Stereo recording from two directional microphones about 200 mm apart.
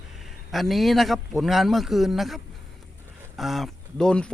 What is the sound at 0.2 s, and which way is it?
A man's voice, centre (ahead or behind).